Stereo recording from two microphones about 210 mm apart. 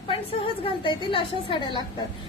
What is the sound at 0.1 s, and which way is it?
A woman's voice, 25° left (ahead or behind).